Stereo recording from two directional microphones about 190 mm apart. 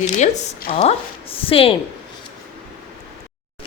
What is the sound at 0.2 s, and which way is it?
A woman's voice, 40° left (ahead or behind).